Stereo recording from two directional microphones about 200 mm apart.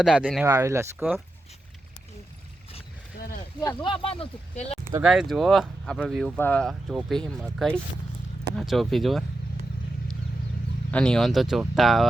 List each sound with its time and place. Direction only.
0.0 s speech: centre (ahead or behind)
0.4 s speech: 15° right (ahead or behind)
3.2 s a sound: 45° left (ahead or behind)
3.6 s speech: 20° left (ahead or behind)
5.0 s speech: centre (ahead or behind)
10.9 s speech: 5° left (ahead or behind)